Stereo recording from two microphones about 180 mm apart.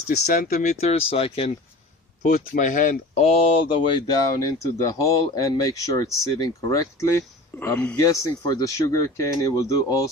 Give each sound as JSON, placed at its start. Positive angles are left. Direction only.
{"t": 0.3, "sound": "speech", "side_deg": 45}
{"t": 2.2, "sound": "speech", "side_deg": 45}